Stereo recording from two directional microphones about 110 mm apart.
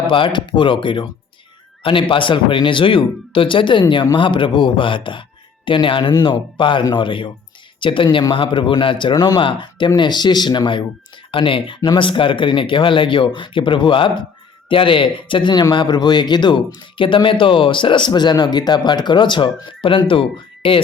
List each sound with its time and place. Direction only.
0.1 s speech: 50° left (ahead or behind)
9.4 s speech: 50° left (ahead or behind)